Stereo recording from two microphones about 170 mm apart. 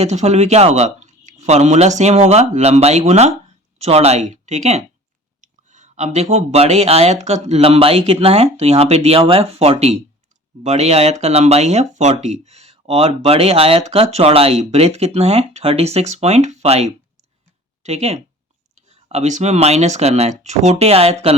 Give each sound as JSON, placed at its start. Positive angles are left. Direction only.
{"t": 0.0, "sound": "speech", "side_deg": -40}